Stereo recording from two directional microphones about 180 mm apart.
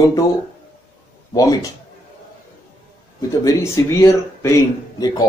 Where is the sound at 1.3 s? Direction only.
20° left (ahead or behind).